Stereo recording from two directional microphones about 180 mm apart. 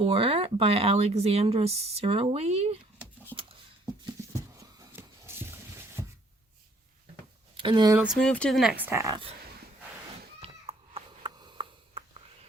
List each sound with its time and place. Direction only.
0.0 s speech: 30° right (ahead or behind)
4.0 s a sound: 20° right (ahead or behind)
7.5 s speech: 25° right (ahead or behind)
7.9 s speech: centre (ahead or behind); by 9.2 s 20° right (ahead or behind)
10.4 s cat: 30° right (ahead or behind)